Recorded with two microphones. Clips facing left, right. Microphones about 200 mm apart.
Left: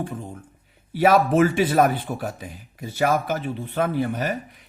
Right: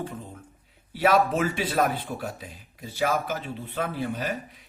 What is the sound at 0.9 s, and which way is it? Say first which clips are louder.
Speech: left 5 dB; 50° left (ahead or behind).